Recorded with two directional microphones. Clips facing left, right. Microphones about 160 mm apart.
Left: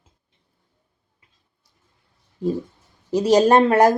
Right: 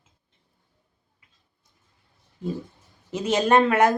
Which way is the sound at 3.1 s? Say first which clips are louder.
Left 5 dB; 35° left (ahead or behind).